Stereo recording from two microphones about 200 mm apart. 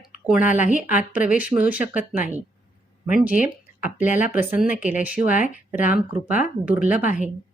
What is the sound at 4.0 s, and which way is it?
Speech, 40° left (ahead or behind).